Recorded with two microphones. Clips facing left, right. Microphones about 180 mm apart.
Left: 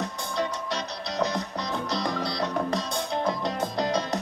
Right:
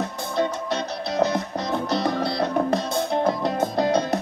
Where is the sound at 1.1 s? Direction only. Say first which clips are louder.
Right 5 dB; 60° right (ahead or behind).